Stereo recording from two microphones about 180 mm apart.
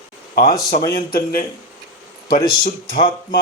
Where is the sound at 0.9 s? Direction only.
55° left (ahead or behind).